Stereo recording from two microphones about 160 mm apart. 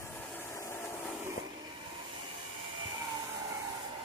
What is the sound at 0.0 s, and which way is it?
Vehicle, 10° left (ahead or behind).